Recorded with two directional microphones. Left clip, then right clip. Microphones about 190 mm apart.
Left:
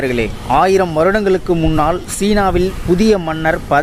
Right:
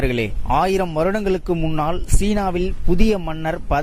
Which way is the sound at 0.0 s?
50° right (ahead or behind).